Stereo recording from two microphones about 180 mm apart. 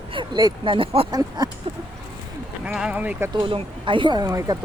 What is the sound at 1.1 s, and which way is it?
Speech, 20° right (ahead or behind).